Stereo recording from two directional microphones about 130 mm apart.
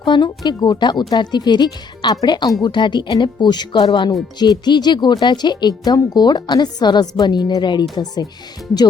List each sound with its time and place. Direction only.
0.0 s speech: 35° left (ahead or behind)